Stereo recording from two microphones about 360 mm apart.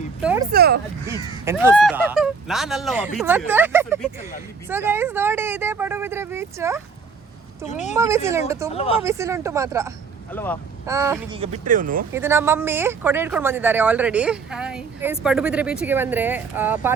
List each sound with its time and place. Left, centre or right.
0.2 s speech: centre
0.5 s speech: right
1.5 s speech: centre
7.7 s speech: centre
7.9 s speech: centre
8.7 s speech: centre
9.0 s speech: centre
10.3 s speech: centre
10.8 s speech: centre
12.1 s speech: centre